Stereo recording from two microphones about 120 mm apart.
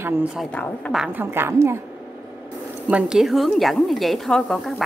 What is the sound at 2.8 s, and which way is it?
A woman's voice, 10° right (ahead or behind).